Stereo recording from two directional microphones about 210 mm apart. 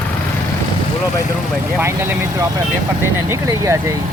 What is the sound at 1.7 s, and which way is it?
Speech, 10° right (ahead or behind).